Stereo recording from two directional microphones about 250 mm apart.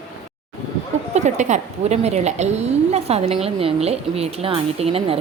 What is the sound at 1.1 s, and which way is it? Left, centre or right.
Speech, right.